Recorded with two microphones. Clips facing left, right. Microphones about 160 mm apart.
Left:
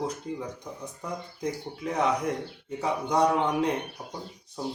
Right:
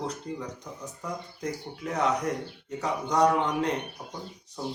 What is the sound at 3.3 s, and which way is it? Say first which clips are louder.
Speech: left 1 dB; 10° left (ahead or behind).